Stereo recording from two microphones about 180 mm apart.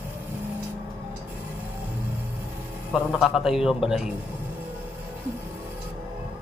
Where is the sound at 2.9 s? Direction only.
Centre (ahead or behind).